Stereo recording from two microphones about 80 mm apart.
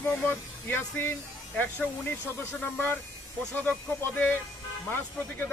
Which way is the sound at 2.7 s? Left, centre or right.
Left.